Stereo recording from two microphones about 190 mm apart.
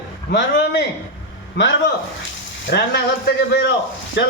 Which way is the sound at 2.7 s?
60° left (ahead or behind).